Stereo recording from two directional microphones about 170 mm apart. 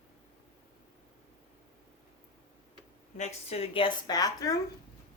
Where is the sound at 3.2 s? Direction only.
40° left (ahead or behind); by 4.5 s 20° left (ahead or behind).